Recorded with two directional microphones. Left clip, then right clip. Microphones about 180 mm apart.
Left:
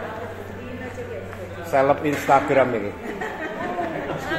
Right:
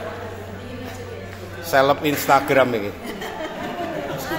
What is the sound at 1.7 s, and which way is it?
A man's voice, 10° right (ahead or behind).